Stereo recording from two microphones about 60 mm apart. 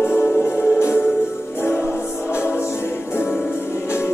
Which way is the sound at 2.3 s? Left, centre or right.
Left.